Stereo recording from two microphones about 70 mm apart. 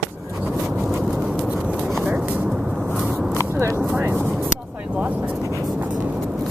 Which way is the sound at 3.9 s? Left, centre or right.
Right.